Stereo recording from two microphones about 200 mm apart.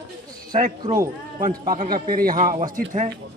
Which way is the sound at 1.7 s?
45° right (ahead or behind).